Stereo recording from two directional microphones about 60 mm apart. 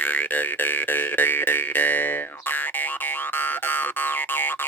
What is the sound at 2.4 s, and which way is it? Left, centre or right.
Boing, left.